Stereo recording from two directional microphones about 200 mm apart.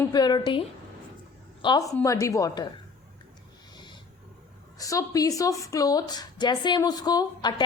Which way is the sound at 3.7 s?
25° left (ahead or behind).